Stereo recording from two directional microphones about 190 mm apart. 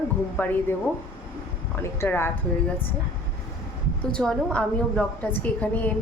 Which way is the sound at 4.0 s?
5° left (ahead or behind).